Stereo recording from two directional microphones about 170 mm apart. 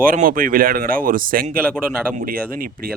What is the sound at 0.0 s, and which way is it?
Speech, 55° right (ahead or behind).